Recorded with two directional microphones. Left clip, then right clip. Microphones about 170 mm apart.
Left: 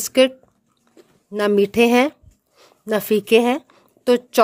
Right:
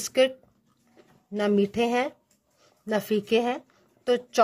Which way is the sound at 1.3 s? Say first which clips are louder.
Left 7 dB; 45° left (ahead or behind).